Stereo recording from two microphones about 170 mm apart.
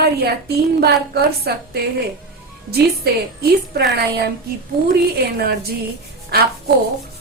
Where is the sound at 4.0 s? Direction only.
70° right (ahead or behind).